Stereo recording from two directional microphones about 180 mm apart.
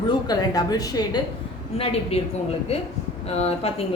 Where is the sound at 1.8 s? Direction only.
35° left (ahead or behind).